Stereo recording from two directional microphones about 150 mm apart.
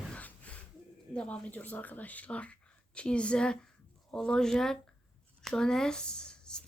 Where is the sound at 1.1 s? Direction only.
10° left (ahead or behind).